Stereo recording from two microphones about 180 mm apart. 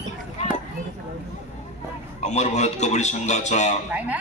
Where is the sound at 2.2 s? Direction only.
40° left (ahead or behind).